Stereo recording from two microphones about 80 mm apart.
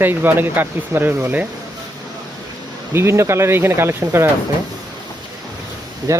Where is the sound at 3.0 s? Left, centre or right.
Right.